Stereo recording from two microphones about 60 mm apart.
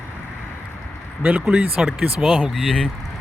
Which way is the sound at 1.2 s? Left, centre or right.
Right.